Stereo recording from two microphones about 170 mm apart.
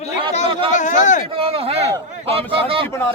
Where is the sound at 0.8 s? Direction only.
45° left (ahead or behind).